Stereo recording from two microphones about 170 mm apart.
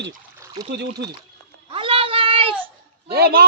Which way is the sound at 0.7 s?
80° right.